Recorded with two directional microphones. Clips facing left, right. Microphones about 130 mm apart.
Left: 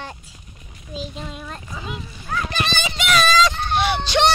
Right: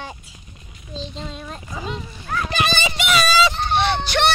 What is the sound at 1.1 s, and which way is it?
Speech, 5° left (ahead or behind).